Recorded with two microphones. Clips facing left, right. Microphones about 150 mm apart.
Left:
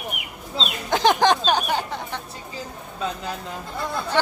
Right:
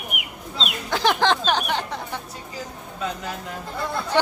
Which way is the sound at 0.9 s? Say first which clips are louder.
Left 3 dB; 20° left (ahead or behind).